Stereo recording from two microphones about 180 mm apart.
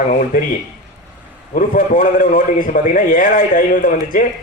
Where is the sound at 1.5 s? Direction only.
50° left (ahead or behind).